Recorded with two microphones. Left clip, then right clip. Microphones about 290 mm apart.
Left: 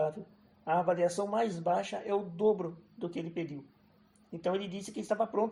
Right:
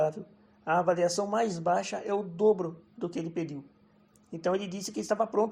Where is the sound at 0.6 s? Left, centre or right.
Right.